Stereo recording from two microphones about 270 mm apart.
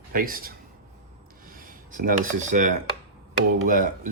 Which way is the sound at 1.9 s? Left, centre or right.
Right.